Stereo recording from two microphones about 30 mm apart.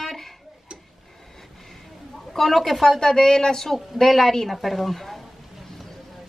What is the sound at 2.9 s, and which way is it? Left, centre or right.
Speech, left.